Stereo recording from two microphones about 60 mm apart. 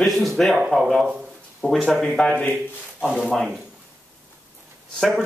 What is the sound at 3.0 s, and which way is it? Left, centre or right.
Speech, centre.